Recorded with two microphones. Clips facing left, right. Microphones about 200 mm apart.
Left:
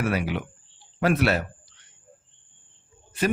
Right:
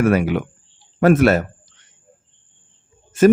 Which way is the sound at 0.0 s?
50° right (ahead or behind).